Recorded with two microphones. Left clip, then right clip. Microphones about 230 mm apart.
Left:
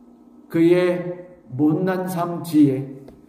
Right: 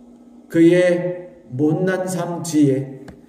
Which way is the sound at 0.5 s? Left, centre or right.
Left.